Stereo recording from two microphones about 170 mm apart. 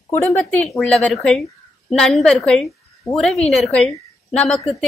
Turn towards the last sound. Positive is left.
turn(degrees=0)  # may be behind; listen again after turning